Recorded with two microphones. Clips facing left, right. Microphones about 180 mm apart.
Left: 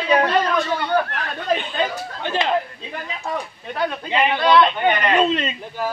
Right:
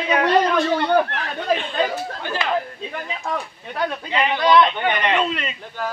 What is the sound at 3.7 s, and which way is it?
A man's voice, 15° left (ahead or behind).